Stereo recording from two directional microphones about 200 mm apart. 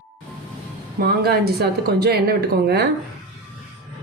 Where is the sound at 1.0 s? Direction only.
50° right (ahead or behind).